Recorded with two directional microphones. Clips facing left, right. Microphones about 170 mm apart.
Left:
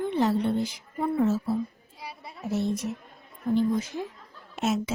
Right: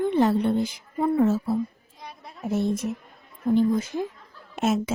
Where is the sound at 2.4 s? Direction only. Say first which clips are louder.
Right 3 dB; 50° right (ahead or behind).